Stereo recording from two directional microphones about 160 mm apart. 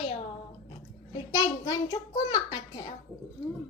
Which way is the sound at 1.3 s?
20° left (ahead or behind).